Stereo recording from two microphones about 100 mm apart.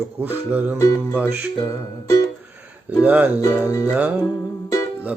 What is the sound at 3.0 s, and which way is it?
Music, 15° right (ahead or behind).